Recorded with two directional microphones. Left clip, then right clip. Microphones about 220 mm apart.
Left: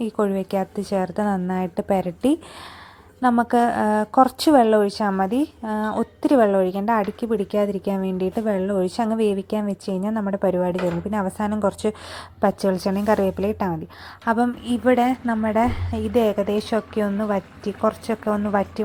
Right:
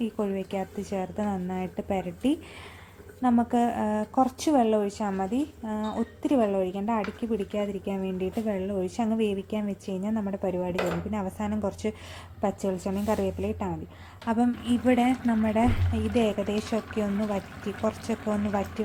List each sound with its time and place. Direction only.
0.0 s a woman's voice: 15° left (ahead or behind)